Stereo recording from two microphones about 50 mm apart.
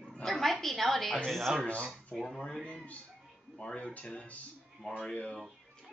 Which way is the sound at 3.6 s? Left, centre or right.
Left.